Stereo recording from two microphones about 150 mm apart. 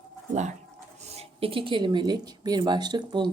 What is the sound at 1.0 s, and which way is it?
Speech, 40° right (ahead or behind).